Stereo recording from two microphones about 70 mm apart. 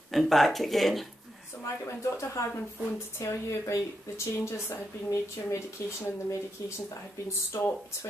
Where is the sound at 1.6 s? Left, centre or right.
Left.